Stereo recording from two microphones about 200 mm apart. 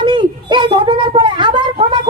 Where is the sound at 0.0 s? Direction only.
25° right (ahead or behind).